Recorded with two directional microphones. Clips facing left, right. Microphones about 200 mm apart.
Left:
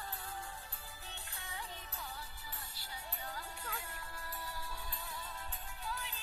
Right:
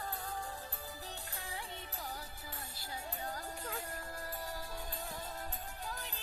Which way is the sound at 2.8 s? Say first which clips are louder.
Right 6 dB; 45° right (ahead or behind).